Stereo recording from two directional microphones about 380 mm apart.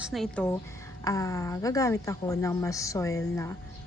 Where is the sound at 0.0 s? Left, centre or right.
Centre.